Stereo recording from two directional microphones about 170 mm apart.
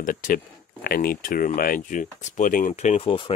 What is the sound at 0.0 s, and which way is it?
Speech, 55° left (ahead or behind).